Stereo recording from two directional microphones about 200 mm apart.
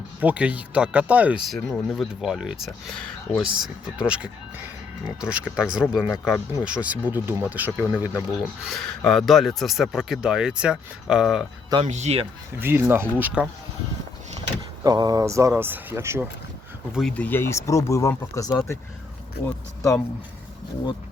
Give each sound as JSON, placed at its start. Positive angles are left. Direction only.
{"t": 0.2, "sound": "speech", "side_deg": -5}
{"t": 8.6, "sound": "speech", "side_deg": 0}
{"t": 11.9, "sound": "speech", "side_deg": -35}
{"t": 12.5, "sound": "speech", "side_deg": -10}
{"t": 14.8, "sound": "speech", "side_deg": -20}
{"t": 16.9, "sound": "speech", "side_deg": 0}
{"t": 19.5, "sound": "a sound", "side_deg": 15}